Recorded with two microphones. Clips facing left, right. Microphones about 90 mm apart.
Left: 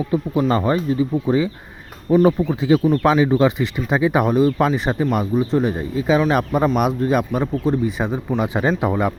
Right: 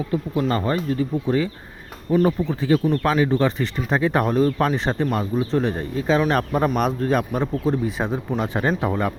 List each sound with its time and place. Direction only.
0.1 s speech: 20° left (ahead or behind); by 8.4 s centre (ahead or behind)
8.4 s speech: 10° left (ahead or behind)